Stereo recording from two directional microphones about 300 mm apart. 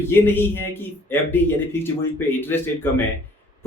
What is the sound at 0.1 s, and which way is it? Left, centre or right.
A man's voice, centre.